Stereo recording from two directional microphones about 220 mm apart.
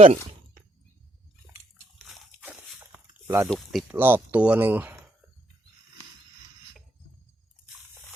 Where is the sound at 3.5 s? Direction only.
Centre (ahead or behind).